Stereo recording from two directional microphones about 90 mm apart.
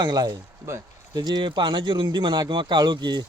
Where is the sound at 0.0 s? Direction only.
50° right (ahead or behind).